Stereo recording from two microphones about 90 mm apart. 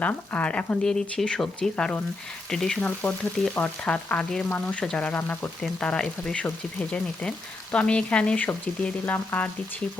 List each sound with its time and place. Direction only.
0.0 s speech: 15° left (ahead or behind)
2.8 s speech: 15° left (ahead or behind)
5.8 s speech: 10° left (ahead or behind)